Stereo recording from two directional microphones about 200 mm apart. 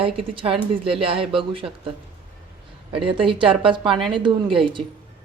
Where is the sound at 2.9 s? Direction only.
25° right (ahead or behind).